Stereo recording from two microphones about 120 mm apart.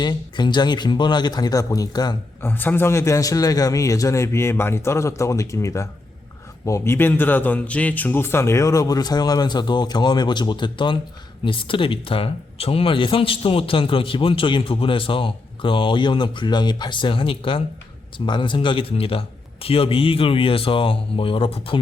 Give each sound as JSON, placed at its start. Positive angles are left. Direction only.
{"t": 0.0, "sound": "speech", "side_deg": 35}
{"t": 2.4, "sound": "a man's voice", "side_deg": 15}